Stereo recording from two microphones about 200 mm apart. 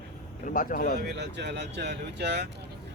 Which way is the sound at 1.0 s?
60° right (ahead or behind).